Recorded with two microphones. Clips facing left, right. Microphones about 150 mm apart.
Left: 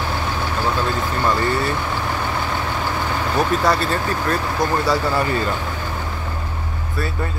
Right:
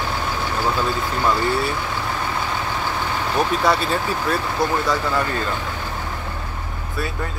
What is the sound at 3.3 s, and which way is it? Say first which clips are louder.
Speech: left 1 dB; centre (ahead or behind).